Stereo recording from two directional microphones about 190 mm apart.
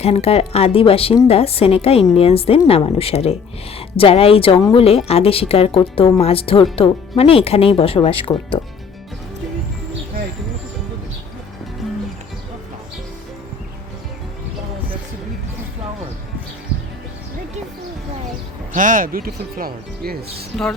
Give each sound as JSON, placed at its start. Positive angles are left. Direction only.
{"t": 0.0, "sound": "a woman's voice", "side_deg": 35}
{"t": 18.7, "sound": "speech", "side_deg": -45}